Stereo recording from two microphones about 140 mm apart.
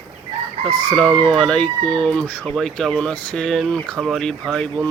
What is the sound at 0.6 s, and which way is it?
Speech, 5° left (ahead or behind).